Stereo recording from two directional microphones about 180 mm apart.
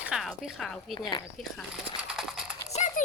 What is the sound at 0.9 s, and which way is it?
Speech, 25° left (ahead or behind).